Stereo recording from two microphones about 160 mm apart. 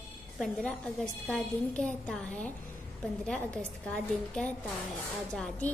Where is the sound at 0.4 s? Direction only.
5° left (ahead or behind).